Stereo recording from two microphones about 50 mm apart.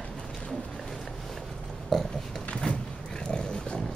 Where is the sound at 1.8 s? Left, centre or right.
Centre.